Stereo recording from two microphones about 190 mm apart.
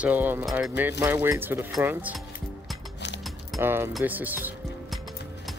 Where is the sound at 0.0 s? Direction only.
10° right (ahead or behind).